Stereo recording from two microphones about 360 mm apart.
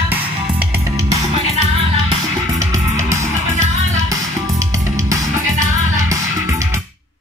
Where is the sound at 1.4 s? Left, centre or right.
Centre.